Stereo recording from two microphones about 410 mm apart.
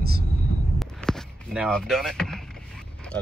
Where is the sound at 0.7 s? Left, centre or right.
Centre.